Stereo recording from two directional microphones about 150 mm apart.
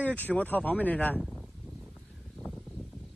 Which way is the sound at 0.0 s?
10° left (ahead or behind).